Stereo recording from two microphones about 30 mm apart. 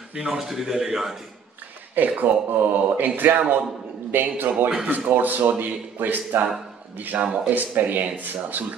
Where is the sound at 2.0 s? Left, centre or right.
Right.